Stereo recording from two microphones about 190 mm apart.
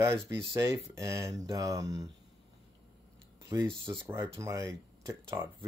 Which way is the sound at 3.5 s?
15° right (ahead or behind).